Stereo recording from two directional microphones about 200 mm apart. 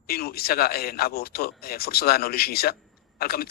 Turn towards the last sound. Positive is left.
turn(degrees=50)  # may be behind; listen again after turning